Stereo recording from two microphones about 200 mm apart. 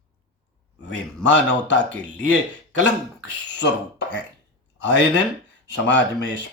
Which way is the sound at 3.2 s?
60° left (ahead or behind).